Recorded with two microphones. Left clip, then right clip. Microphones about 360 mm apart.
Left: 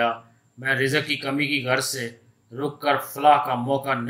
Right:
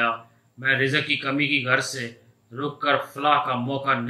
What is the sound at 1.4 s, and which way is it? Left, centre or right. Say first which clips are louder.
Speech: right 1 dB; centre.